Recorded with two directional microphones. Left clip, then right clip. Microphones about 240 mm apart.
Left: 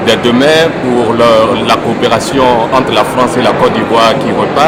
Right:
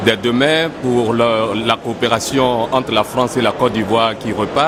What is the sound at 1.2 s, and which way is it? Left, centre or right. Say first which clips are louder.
Music: left 11 dB; right.